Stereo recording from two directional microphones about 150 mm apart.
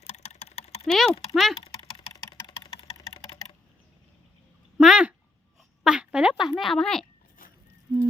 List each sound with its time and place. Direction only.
0.1 s typing: 45° left (ahead or behind)
0.9 s speech: centre (ahead or behind)
1.5 s typing: 35° left (ahead or behind)
4.8 s a sound: 5° right (ahead or behind)
6.5 s speech: centre (ahead or behind)